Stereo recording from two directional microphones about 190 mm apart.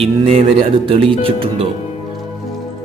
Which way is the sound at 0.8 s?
30° right (ahead or behind).